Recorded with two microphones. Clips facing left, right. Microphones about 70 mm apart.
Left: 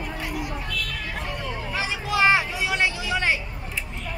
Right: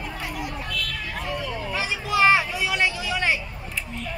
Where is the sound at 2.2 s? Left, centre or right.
Left.